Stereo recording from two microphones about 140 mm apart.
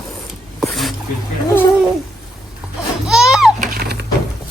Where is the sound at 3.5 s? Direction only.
80° right.